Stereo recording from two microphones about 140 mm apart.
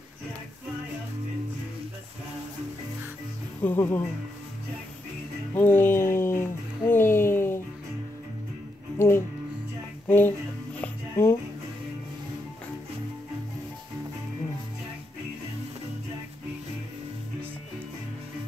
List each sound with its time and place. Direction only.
3.6 s speech: 15° left (ahead or behind)
5.5 s a sound: 15° left (ahead or behind)
8.9 s music: 20° left (ahead or behind)